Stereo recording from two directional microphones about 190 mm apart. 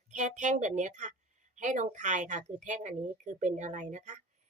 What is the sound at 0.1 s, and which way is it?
Speech, 40° right (ahead or behind).